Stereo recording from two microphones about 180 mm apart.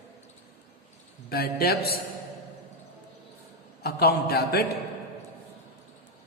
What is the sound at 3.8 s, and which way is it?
Speech, 60° left (ahead or behind).